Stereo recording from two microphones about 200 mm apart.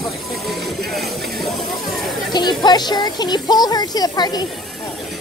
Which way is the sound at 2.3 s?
20° left (ahead or behind).